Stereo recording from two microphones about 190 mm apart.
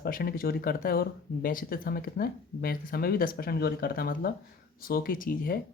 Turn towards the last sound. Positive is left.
turn(degrees=45)  # may be behind; listen again after turning